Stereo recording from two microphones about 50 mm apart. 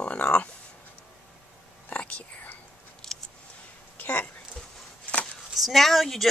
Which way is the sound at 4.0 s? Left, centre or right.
Left.